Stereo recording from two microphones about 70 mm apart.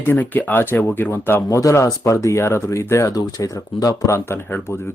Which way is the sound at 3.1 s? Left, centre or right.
Left.